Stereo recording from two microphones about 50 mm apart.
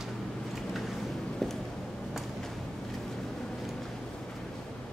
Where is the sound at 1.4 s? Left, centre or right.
Centre.